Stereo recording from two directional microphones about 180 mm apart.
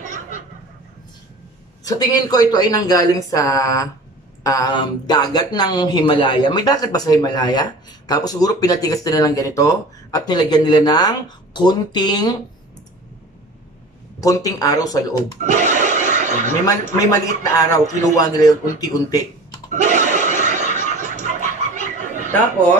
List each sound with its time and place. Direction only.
0.0 s a sound: 45° right (ahead or behind)
1.9 s speech: 20° left (ahead or behind)
14.2 s speech: 20° left (ahead or behind)
15.4 s snicker: 45° right (ahead or behind)
16.6 s speech: 20° left (ahead or behind)
19.7 s a sound: 45° right (ahead or behind)